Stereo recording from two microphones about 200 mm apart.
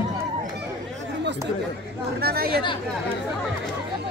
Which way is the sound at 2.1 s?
50° right (ahead or behind).